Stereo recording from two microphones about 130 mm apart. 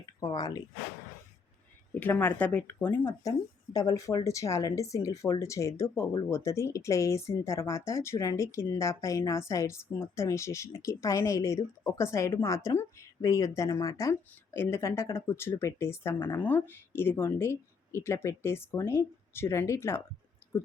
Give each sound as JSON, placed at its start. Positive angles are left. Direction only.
{"t": 0.0, "sound": "speech", "side_deg": 30}
{"t": 1.9, "sound": "speech", "side_deg": 15}
{"t": 3.7, "sound": "a woman's voice", "side_deg": 30}
{"t": 20.4, "sound": "clicking", "side_deg": 20}